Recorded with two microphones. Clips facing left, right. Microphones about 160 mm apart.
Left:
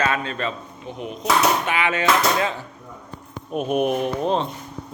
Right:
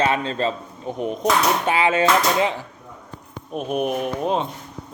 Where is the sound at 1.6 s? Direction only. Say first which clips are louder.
Right 3 dB; 30° right (ahead or behind).